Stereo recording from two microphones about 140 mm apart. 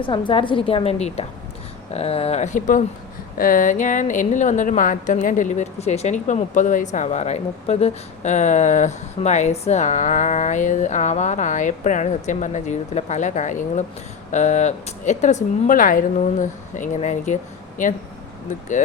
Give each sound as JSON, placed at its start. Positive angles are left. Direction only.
{"t": 0.0, "sound": "a woman's voice", "side_deg": 35}
{"t": 3.3, "sound": "a woman's voice", "side_deg": 80}
{"t": 16.2, "sound": "a woman's voice", "side_deg": 65}